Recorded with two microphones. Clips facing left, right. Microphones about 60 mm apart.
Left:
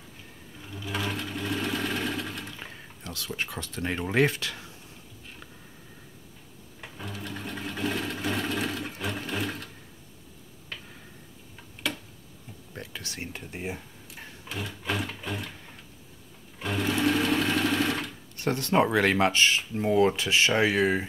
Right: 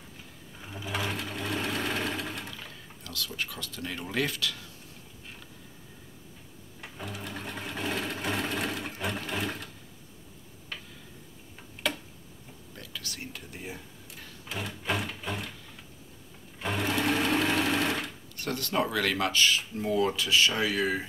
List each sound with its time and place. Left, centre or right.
0.7 s sewing machine: centre
2.6 s speech: left
7.1 s music: centre
7.3 s sewing machine: centre
11.8 s tick-tock: centre
12.7 s a sound: left
14.5 s a sound: centre
16.7 s sewing machine: centre
18.4 s speech: left